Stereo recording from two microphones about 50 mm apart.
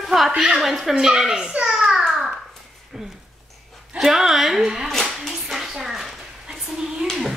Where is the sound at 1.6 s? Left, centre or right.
Centre.